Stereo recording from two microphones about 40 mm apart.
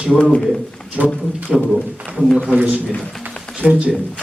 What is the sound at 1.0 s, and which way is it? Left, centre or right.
Speech, right.